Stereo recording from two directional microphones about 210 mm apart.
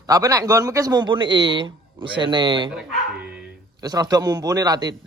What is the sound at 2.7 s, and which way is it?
Bow-wow, 5° right (ahead or behind).